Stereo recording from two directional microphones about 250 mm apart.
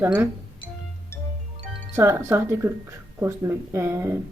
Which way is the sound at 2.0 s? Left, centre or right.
Centre.